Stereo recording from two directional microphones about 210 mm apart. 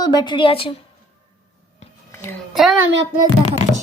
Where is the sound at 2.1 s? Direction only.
10° left (ahead or behind).